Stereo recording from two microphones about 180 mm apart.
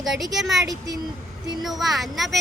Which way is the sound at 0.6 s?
20° right (ahead or behind).